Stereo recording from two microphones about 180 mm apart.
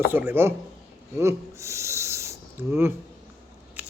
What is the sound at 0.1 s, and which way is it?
Speech, 10° right (ahead or behind).